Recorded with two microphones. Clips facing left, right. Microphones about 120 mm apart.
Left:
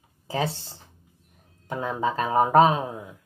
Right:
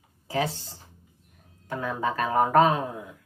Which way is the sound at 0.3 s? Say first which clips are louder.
Even; 25° left (ahead or behind).